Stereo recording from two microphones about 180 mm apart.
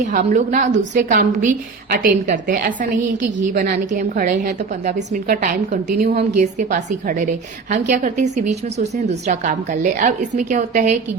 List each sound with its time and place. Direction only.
0.0 s a woman's voice: 45° right (ahead or behind)
3.6 s a woman's voice: 55° right (ahead or behind)